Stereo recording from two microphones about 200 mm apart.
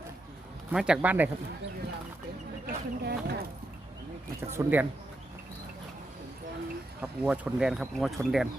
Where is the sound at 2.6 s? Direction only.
55° right (ahead or behind).